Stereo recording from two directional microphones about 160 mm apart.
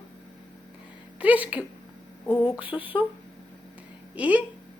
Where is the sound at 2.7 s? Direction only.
15° left (ahead or behind).